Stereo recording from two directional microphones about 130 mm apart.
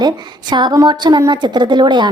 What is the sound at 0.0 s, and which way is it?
A woman's voice, 35° right (ahead or behind).